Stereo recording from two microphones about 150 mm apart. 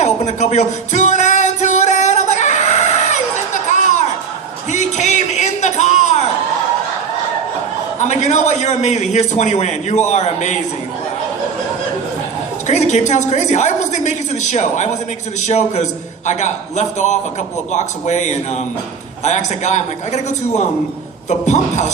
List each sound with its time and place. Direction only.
0.0 s music: 50° left (ahead or behind)
4.7 s a sound: 50° left (ahead or behind)
7.9 s a man's voice: 50° left (ahead or behind)
12.6 s a woman's voice: 50° left (ahead or behind)